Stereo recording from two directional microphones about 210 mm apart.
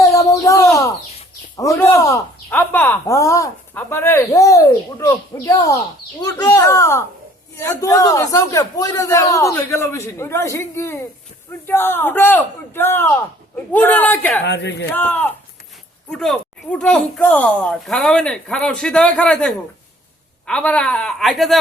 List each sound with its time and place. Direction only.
0.0 s chicken: 15° left (ahead or behind)
1.5 s speech: 15° left (ahead or behind)
14.4 s speech: 55° left (ahead or behind)
14.8 s speech: 10° left (ahead or behind)